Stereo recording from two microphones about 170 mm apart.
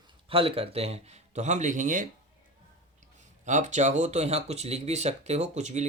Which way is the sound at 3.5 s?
45° right (ahead or behind).